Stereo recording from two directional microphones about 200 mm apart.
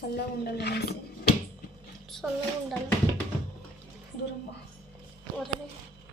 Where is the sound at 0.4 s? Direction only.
55° left (ahead or behind).